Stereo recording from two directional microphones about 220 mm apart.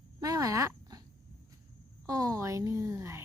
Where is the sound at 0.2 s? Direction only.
15° right (ahead or behind).